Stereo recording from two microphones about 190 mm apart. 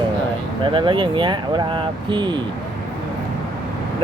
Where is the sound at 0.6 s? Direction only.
25° right (ahead or behind).